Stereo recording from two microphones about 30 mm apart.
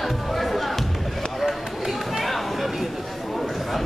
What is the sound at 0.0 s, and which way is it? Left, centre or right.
Music, centre.